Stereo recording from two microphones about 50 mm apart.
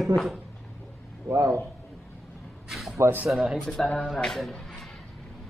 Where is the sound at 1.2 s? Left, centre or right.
Right.